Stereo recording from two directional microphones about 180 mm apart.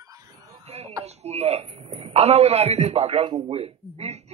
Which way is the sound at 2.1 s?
35° right (ahead or behind).